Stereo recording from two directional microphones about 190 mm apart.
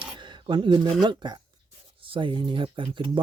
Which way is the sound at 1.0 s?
25° right (ahead or behind).